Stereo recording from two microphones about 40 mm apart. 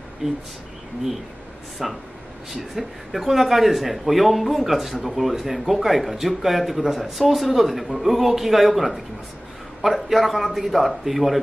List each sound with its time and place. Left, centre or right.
0.2 s speech: centre
1.8 s speech: centre